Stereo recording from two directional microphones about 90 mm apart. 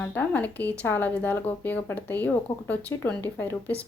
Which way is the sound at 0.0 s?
20° left (ahead or behind).